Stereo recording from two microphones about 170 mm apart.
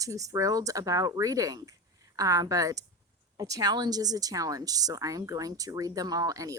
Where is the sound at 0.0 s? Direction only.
20° right (ahead or behind).